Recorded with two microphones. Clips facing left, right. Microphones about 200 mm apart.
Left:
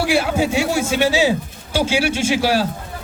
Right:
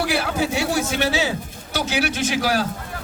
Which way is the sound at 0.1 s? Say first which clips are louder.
Left 4 dB; 25° left (ahead or behind).